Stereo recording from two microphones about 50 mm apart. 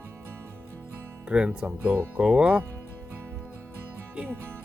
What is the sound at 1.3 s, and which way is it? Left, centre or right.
Speech, centre.